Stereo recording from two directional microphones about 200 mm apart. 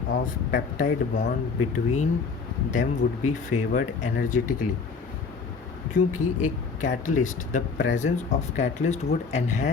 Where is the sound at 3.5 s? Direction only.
90° left.